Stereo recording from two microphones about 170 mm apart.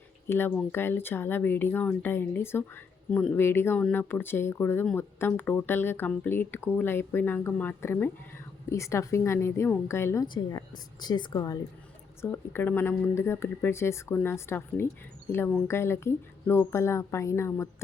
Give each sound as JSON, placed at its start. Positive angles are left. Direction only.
{"t": 0.3, "sound": "speech", "side_deg": 10}
{"t": 10.2, "sound": "speech", "side_deg": 25}
{"t": 12.2, "sound": "speech", "side_deg": 15}